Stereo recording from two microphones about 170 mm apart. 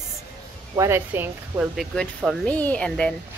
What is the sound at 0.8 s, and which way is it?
Speech, 15° right (ahead or behind).